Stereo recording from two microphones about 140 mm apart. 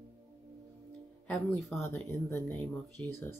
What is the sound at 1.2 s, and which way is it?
Speech, 10° left (ahead or behind).